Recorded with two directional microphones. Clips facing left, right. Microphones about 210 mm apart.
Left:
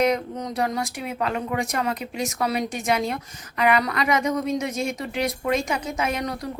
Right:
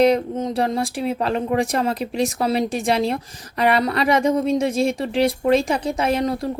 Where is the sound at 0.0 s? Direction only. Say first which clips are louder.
Right 6 dB; 25° right (ahead or behind).